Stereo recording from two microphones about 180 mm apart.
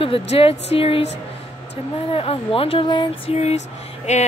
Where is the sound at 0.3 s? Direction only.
35° left (ahead or behind).